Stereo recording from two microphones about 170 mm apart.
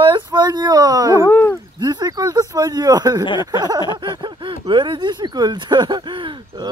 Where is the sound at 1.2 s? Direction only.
15° left (ahead or behind).